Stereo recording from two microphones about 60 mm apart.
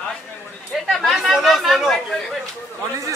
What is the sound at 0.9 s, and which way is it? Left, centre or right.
Chatter, centre.